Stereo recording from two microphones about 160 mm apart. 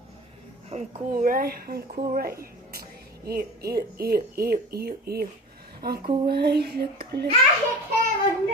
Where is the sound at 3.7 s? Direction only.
75° right (ahead or behind).